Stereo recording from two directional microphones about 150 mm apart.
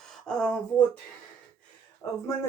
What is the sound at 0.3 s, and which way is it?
Speech, 5° left (ahead or behind).